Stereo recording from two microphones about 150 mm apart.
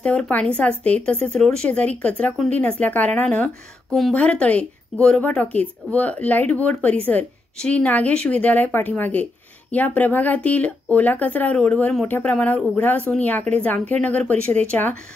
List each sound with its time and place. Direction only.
0.0 s a woman's voice: 5° left (ahead or behind)